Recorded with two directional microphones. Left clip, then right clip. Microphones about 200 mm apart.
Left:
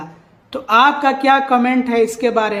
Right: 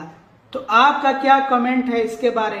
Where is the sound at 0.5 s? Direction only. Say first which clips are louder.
Left 2 dB; 40° left (ahead or behind).